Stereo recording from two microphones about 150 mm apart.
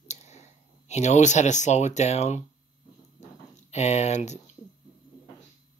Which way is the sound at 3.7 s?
50° left (ahead or behind).